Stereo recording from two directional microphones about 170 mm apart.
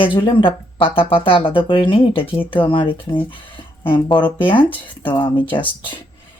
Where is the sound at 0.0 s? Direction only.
30° left (ahead or behind).